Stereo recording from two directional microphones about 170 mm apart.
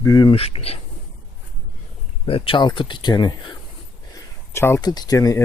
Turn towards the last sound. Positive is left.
turn(degrees=20)  # may be behind; listen again after turning